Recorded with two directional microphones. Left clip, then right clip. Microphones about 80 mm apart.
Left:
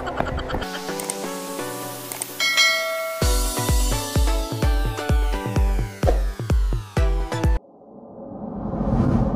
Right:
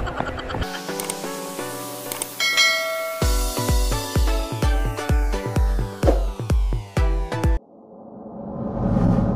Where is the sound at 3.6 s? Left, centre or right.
Centre.